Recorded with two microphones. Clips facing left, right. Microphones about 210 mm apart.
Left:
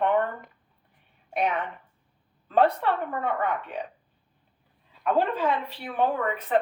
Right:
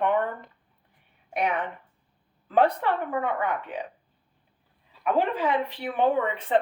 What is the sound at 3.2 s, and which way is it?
Speech, 15° right (ahead or behind).